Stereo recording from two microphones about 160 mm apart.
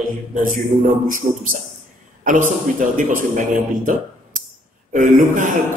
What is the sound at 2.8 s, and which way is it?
Speech, 55° right (ahead or behind).